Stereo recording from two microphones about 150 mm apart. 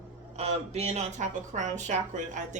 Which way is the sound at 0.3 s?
45° right (ahead or behind).